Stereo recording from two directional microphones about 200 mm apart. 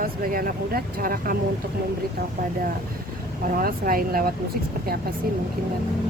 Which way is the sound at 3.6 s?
45° right (ahead or behind).